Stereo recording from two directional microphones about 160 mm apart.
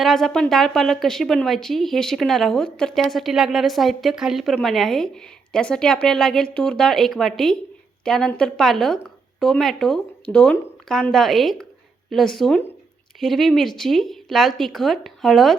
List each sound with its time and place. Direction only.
0.0 s a woman's voice: centre (ahead or behind)